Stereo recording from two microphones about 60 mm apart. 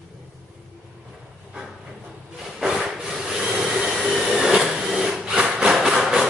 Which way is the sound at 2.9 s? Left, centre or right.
Centre.